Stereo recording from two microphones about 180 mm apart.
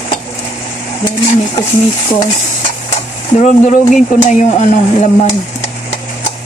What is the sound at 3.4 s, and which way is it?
Stir, 40° left (ahead or behind).